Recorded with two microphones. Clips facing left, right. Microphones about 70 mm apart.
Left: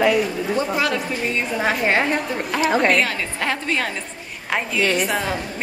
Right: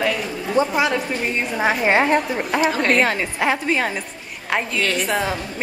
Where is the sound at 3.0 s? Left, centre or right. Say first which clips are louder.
Right 3 dB; right.